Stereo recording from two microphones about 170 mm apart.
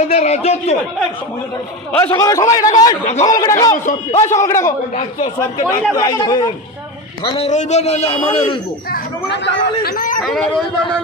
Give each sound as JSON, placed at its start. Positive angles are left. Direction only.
{"t": 0.1, "sound": "a man's voice", "side_deg": 40}
{"t": 2.0, "sound": "a man's voice", "side_deg": 20}
{"t": 3.7, "sound": "speech", "side_deg": 45}
{"t": 4.4, "sound": "a man's voice", "side_deg": 15}
{"t": 7.3, "sound": "a man's voice", "side_deg": 40}
{"t": 8.9, "sound": "speech", "side_deg": 75}
{"t": 10.2, "sound": "speech", "side_deg": 0}